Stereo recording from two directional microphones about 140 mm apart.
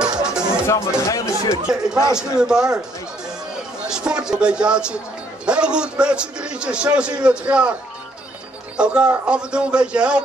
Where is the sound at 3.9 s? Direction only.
5° right (ahead or behind).